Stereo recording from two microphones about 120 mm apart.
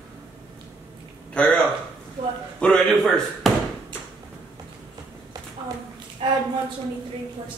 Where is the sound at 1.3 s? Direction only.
10° left (ahead or behind).